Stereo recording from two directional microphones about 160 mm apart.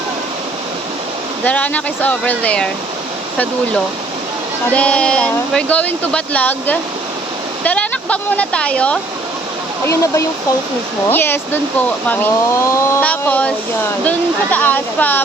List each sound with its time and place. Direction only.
1.5 s speech: 10° left (ahead or behind)
4.7 s speech: 10° left (ahead or behind)
9.8 s speech: 20° left (ahead or behind)